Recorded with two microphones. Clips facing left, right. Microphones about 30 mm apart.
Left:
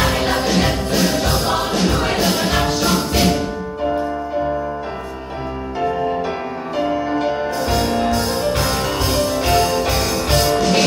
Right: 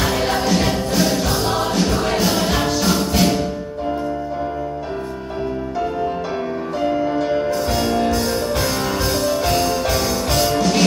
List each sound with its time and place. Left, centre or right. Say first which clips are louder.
0.0 s music: left 1 dB; centre
7.2 s music: even; left
7.4 s music: even; centre